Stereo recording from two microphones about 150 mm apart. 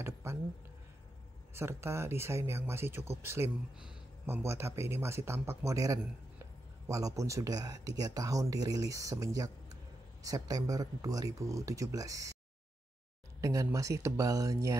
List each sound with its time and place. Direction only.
0.0 s a sound: 20° right (ahead or behind)
1.5 s speech: 15° right (ahead or behind)
13.4 s speech: 20° right (ahead or behind)